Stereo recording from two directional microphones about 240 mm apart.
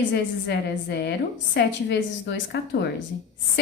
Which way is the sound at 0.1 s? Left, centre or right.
Left.